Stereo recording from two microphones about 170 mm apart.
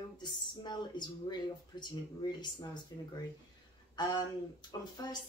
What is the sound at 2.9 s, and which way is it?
Speech, 20° left (ahead or behind).